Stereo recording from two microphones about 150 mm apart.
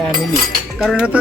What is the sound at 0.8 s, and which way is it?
Speech, centre (ahead or behind).